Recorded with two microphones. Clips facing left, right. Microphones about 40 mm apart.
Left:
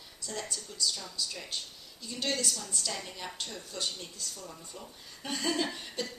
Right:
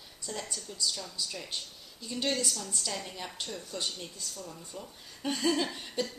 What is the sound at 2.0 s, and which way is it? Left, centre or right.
Speech, centre.